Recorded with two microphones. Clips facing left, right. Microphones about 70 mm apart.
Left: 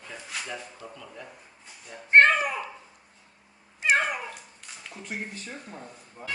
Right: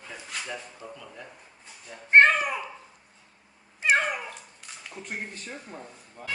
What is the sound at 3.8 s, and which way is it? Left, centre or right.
Cat, centre.